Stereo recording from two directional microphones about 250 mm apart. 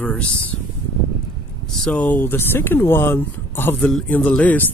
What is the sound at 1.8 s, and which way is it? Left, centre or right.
Speech, centre.